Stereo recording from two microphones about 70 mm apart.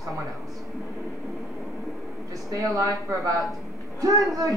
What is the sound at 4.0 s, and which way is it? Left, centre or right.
Speech, right.